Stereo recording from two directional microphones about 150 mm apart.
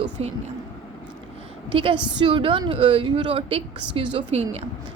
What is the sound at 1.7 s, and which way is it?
A woman's voice, 35° right (ahead or behind).